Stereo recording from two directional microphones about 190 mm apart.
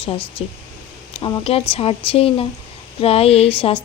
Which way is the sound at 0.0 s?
30° left (ahead or behind).